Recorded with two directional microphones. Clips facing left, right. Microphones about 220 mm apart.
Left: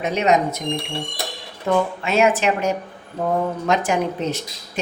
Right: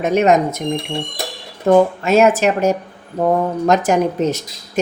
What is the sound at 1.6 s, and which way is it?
A woman's voice, 45° right (ahead or behind).